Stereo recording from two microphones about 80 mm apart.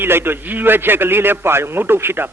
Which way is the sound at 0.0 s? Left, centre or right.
Right.